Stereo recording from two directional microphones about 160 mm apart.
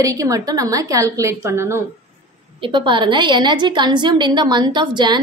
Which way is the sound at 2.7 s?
30° right (ahead or behind).